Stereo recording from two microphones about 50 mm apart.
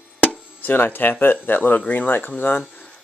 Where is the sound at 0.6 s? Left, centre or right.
Left.